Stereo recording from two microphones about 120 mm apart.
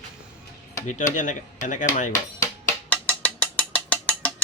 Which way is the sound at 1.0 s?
90° left.